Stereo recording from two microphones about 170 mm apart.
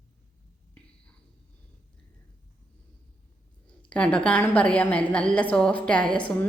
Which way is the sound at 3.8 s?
5° left (ahead or behind).